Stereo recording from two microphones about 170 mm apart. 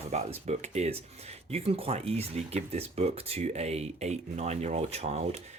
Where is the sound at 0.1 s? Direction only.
40° right (ahead or behind).